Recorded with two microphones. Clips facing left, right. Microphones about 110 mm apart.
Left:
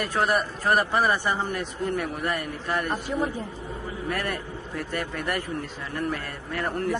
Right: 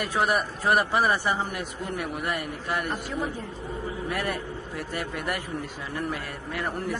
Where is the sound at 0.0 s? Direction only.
10° right (ahead or behind).